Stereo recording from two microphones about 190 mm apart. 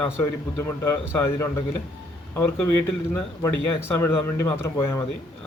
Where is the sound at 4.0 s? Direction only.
10° left (ahead or behind).